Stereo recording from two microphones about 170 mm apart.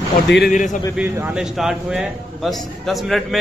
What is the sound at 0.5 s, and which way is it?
Speech, 50° left (ahead or behind).